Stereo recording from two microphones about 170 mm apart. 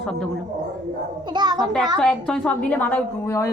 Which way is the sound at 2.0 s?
5° left (ahead or behind).